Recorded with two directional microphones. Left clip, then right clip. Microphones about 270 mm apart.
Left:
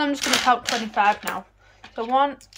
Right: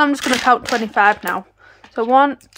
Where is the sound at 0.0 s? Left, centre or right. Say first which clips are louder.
Right 5 dB; centre.